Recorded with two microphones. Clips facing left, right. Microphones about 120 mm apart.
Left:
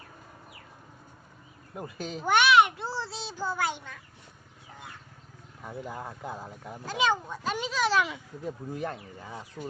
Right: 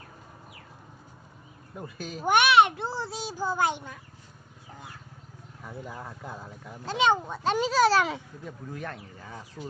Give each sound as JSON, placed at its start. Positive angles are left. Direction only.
{"t": 1.7, "sound": "speech", "side_deg": 20}
{"t": 2.1, "sound": "a child's voice", "side_deg": -15}
{"t": 5.8, "sound": "speech", "side_deg": 15}
{"t": 6.8, "sound": "speech", "side_deg": -20}
{"t": 7.5, "sound": "speech", "side_deg": -35}
{"t": 8.7, "sound": "speech", "side_deg": 20}
{"t": 9.6, "sound": "speech", "side_deg": 0}